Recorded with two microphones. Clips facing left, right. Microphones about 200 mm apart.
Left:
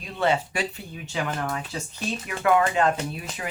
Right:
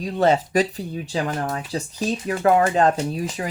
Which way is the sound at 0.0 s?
40° right (ahead or behind).